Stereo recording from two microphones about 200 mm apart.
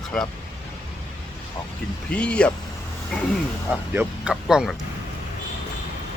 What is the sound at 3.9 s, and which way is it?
Speech, 5° right (ahead or behind).